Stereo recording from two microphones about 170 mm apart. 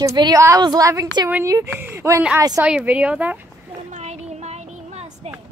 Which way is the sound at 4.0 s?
40° right (ahead or behind).